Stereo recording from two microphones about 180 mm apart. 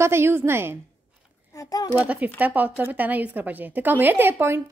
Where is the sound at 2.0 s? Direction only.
10° right (ahead or behind).